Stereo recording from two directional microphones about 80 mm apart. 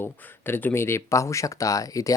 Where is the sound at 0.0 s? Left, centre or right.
Left.